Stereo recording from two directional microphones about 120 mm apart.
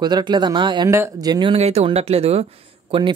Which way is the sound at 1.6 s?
65° right (ahead or behind).